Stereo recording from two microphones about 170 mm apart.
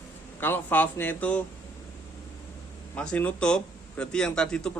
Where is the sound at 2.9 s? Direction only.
5° left (ahead or behind).